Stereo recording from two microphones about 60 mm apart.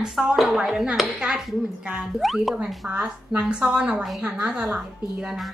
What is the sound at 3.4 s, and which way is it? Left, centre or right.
A woman's voice, centre.